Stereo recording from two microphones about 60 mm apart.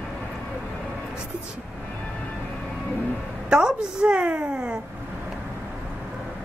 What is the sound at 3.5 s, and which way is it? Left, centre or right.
A woman's voice, centre.